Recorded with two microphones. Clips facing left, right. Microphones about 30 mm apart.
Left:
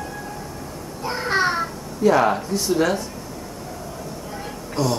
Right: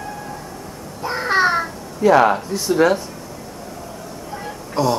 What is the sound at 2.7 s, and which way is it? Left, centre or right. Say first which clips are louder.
Speech: right 5 dB; centre.